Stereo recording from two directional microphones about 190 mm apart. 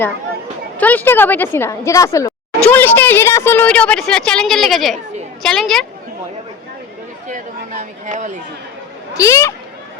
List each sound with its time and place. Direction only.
0.8 s a woman's voice: 10° left (ahead or behind)
7.3 s chatter: 40° right (ahead or behind)
9.1 s a woman's voice: 15° left (ahead or behind)